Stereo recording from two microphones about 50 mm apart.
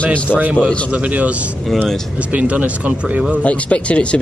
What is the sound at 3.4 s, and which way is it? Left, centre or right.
Speech, left.